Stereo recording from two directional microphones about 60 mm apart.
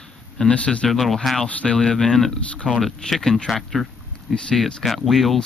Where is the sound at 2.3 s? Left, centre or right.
Centre.